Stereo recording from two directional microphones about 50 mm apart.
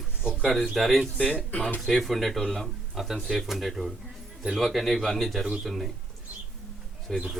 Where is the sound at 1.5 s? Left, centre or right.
Left.